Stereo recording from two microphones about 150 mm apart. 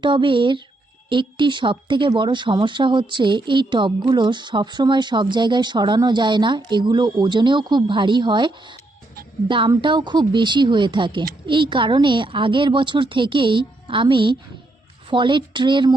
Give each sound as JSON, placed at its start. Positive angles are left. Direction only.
{"t": 0.0, "sound": "speech", "side_deg": -35}